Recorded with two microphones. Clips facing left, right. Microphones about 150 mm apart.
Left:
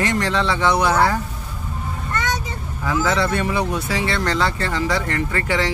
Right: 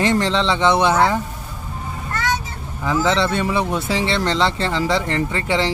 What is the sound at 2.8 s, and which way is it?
Speech, 25° right (ahead or behind).